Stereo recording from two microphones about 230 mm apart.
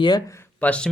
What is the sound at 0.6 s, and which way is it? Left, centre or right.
Speech, centre.